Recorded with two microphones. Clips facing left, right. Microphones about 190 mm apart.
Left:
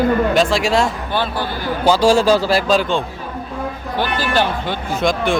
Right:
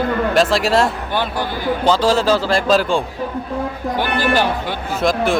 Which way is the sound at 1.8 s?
10° left (ahead or behind).